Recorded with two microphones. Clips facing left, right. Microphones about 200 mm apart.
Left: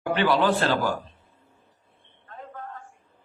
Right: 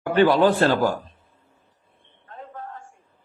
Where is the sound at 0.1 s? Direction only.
45° right (ahead or behind).